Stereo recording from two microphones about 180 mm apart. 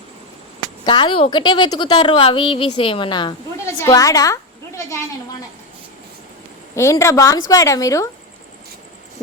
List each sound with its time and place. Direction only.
0.9 s a woman's voice: 25° left (ahead or behind)
6.7 s a woman's voice: 15° left (ahead or behind)